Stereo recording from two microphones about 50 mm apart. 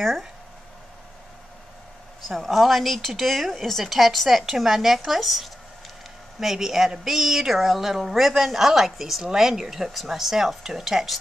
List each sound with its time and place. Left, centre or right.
2.2 s a woman's voice: centre